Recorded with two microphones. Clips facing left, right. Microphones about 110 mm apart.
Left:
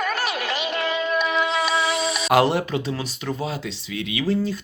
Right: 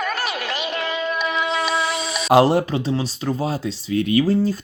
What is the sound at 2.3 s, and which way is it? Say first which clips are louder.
Speech: right 4 dB; 35° right (ahead or behind).